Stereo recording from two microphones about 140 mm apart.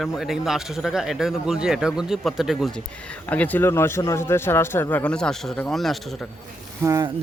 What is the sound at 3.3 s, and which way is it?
A man's voice, 10° left (ahead or behind).